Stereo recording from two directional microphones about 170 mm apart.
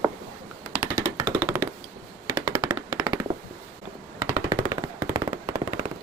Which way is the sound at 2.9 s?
20° right (ahead or behind).